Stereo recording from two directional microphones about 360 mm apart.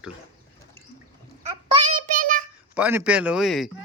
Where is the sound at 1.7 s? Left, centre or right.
Right.